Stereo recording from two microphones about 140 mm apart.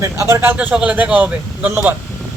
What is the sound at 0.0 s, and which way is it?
Speech, 20° right (ahead or behind).